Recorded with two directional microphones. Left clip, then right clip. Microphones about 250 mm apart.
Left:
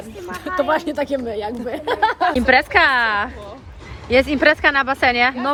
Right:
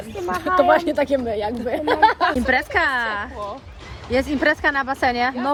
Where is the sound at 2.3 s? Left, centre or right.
Centre.